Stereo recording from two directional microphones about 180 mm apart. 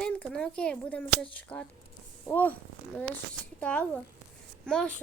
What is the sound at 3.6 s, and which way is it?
A child's voice, 5° left (ahead or behind).